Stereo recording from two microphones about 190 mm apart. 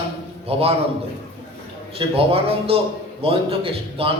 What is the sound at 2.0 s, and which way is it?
A man's voice, 30° right (ahead or behind).